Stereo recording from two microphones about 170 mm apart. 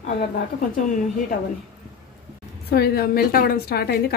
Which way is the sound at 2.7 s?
65° left (ahead or behind).